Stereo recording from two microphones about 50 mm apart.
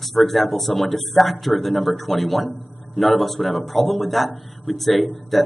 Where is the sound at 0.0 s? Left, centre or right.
Centre.